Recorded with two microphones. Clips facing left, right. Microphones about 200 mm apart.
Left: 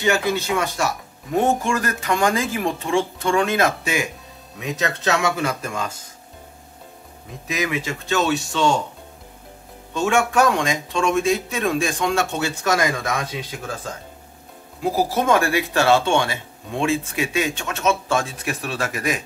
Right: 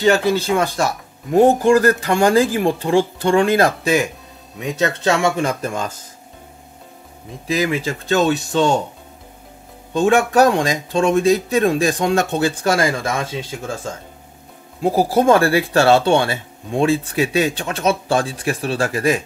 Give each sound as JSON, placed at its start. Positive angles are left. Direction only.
{"t": 0.0, "sound": "speech", "side_deg": -35}
{"t": 7.4, "sound": "speech", "side_deg": -30}
{"t": 9.9, "sound": "speech", "side_deg": -35}
{"t": 15.1, "sound": "speech", "side_deg": -35}